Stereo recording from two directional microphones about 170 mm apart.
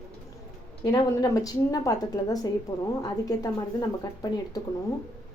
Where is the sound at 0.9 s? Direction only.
20° left (ahead or behind).